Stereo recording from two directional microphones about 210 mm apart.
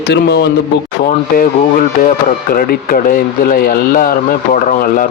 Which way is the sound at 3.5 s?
40° left (ahead or behind).